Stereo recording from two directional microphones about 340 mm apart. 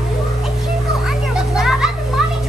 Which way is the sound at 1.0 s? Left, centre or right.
Centre.